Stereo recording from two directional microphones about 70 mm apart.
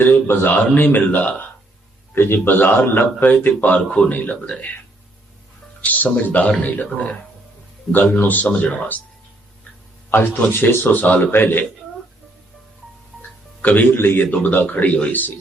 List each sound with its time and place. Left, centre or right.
0.0 s a man's voice: left
3.8 s a man's voice: centre
5.8 s a man's voice: left
10.1 s a man's voice: left
13.6 s a man's voice: left